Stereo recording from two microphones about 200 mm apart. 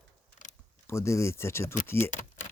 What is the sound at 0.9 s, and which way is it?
Speech, 15° left (ahead or behind).